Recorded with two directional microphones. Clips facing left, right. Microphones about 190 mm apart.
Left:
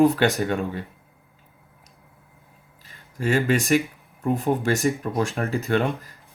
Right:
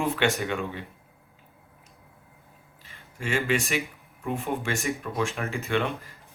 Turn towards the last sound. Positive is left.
turn(degrees=40)  # may be behind; listen again after turning